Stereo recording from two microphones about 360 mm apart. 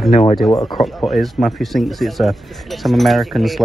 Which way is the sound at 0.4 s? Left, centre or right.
Centre.